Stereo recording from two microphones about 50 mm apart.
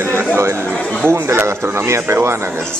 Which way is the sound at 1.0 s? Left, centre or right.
Right.